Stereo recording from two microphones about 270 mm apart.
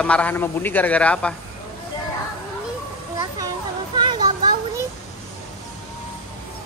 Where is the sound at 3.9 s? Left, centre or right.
Centre.